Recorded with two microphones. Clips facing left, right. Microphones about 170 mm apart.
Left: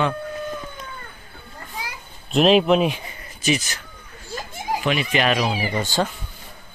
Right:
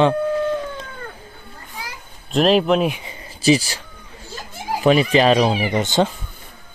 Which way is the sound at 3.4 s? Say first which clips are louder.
Right 7 dB; 30° right (ahead or behind).